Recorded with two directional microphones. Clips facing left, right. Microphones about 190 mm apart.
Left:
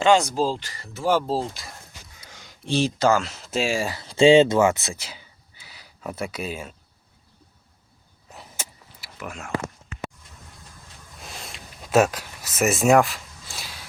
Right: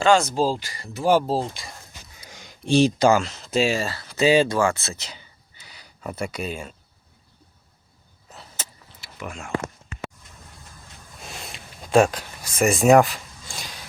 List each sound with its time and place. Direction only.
0.0 s speech: 15° left (ahead or behind)
0.3 s speech: 10° right (ahead or behind)
1.3 s speech: centre (ahead or behind)
2.2 s a sound: 15° right (ahead or behind)
3.2 s speech: 5° left (ahead or behind)
3.8 s speech: 15° left (ahead or behind)
8.3 s vehicle: 15° left (ahead or behind)
9.1 s speech: 5° left (ahead or behind)
11.5 s a sound: 5° left (ahead or behind)